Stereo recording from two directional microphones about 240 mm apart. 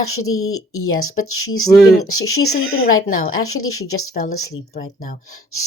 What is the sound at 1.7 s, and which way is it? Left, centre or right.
Speech, centre.